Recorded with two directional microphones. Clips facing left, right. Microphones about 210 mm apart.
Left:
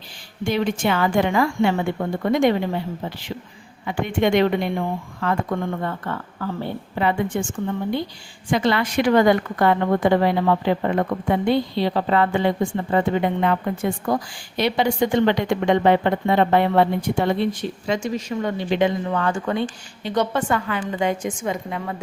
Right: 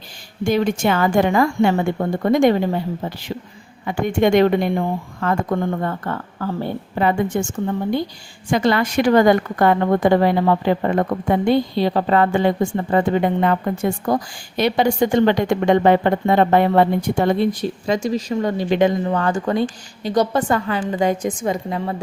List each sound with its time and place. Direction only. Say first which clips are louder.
0.4 s a woman's voice: right 3 dB; 45° right (ahead or behind)